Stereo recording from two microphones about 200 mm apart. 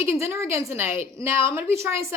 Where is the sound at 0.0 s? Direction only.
10° right (ahead or behind).